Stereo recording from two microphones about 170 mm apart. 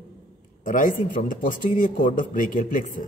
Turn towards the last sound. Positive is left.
turn(degrees=50)  # may be behind; listen again after turning